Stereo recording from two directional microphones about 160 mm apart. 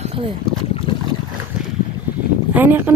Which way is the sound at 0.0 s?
35° right (ahead or behind).